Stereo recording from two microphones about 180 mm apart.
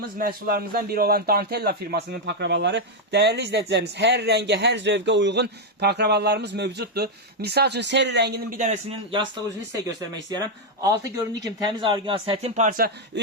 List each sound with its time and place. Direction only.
0.2 s a man's voice: 55° right (ahead or behind)
10.3 s speech: 20° right (ahead or behind); by 13.2 s 55° right (ahead or behind)